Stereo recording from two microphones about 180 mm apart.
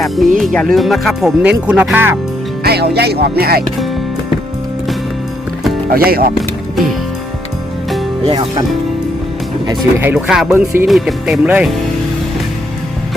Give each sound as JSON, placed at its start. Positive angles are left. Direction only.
{"t": 0.3, "sound": "speech", "side_deg": 0}
{"t": 2.6, "sound": "speech", "side_deg": -60}
{"t": 5.9, "sound": "speech", "side_deg": -55}
{"t": 8.3, "sound": "speech", "side_deg": -25}
{"t": 9.6, "sound": "speech", "side_deg": -10}